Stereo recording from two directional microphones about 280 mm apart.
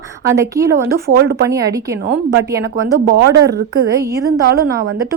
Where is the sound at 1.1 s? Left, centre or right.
Right.